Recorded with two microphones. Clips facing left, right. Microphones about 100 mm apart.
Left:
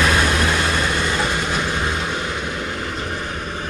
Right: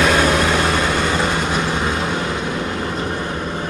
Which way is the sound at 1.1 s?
30° right (ahead or behind).